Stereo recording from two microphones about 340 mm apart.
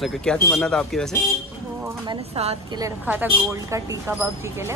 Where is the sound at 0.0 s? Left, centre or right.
Centre.